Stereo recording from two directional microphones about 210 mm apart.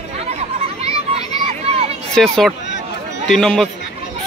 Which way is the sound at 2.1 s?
5° left (ahead or behind).